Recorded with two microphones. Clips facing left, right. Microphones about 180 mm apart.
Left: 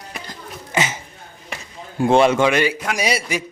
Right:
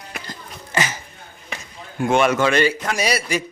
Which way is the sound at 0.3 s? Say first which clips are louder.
Left 1 dB; 20° left (ahead or behind).